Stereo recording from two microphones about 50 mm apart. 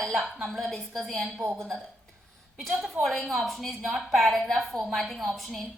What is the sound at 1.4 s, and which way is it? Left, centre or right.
Speech, right.